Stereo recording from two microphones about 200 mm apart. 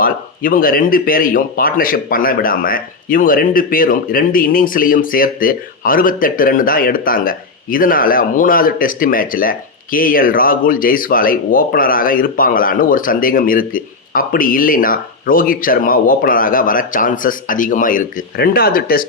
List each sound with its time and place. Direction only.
0.0 s speech: 45° left (ahead or behind)